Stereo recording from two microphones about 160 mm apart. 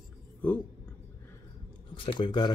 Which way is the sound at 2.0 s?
30° left (ahead or behind).